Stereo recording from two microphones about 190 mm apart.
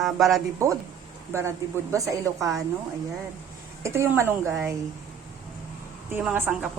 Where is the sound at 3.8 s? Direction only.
15° right (ahead or behind).